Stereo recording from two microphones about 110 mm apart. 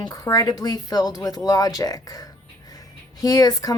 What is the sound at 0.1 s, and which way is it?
A woman's voice, 30° left (ahead or behind).